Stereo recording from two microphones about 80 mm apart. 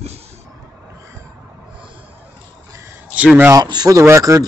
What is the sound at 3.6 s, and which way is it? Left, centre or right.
Speech, right.